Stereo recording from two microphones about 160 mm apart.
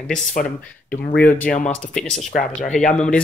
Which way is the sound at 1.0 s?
75° left (ahead or behind).